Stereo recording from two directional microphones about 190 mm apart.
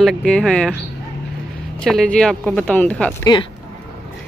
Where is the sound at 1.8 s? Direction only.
Centre (ahead or behind).